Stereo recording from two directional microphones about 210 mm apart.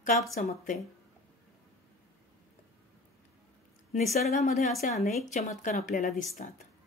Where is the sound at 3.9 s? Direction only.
35° left (ahead or behind).